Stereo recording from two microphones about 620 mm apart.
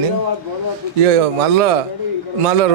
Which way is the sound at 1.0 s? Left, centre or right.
Right.